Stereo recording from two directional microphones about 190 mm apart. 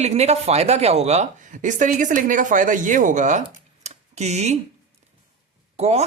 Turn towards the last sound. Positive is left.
turn(degrees=-35)  # may be behind; listen again after turning